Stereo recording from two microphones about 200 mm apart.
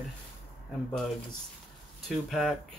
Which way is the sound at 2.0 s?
Centre (ahead or behind).